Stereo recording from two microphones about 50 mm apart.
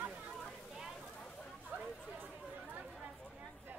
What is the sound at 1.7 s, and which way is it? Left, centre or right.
Chatter, right.